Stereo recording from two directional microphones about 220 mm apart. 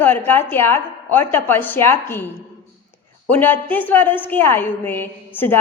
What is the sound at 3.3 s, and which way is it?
A woman's voice, 10° left (ahead or behind).